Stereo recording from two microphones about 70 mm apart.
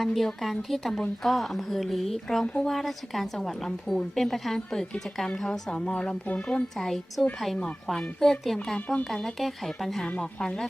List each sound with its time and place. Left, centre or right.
0.0 s a woman's voice: centre
5.7 s speech: centre
6.7 s a woman's voice: centre